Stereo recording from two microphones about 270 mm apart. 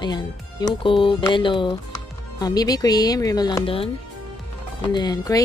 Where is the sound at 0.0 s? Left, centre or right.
Centre.